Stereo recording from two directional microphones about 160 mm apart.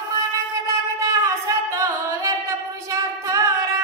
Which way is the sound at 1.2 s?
20° right (ahead or behind).